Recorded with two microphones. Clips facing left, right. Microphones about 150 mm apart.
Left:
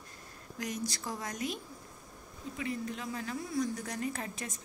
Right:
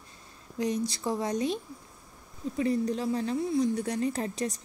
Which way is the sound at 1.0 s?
30° right (ahead or behind).